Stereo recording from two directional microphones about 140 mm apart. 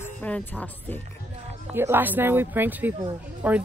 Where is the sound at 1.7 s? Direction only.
15° right (ahead or behind).